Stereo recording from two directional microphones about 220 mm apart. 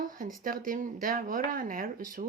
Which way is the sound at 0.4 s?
40° right (ahead or behind).